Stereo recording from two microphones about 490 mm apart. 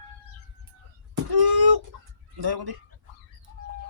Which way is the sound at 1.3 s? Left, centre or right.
Right.